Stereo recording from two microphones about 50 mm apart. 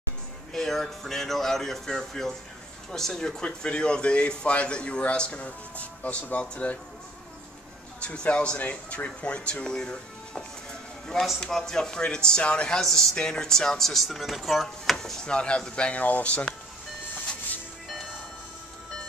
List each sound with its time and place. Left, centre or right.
0.5 s speech: centre; by 6.8 s left
8.0 s speech: left